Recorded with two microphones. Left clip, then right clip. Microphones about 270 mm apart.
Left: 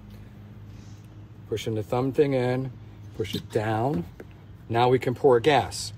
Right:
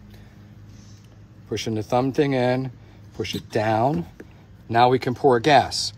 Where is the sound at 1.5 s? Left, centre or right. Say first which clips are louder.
Right 4 dB; right.